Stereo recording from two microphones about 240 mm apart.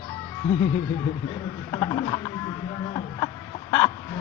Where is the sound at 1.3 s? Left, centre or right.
Centre.